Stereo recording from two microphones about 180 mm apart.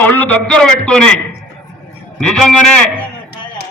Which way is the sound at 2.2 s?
5° left (ahead or behind).